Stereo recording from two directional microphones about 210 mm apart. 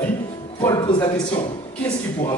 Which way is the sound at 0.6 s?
20° left (ahead or behind).